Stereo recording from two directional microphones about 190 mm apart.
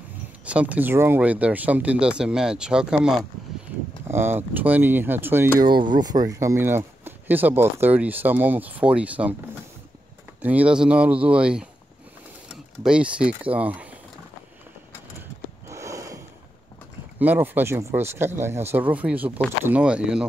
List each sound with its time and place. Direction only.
0.5 s speech: 5° right (ahead or behind)
5.6 s speech: 25° right (ahead or behind); by 9.3 s 5° right (ahead or behind)
10.4 s speech: 10° right (ahead or behind)
12.8 s speech: 5° right (ahead or behind)
15.7 s a sound: 15° right (ahead or behind)
17.2 s speech: 10° right (ahead or behind)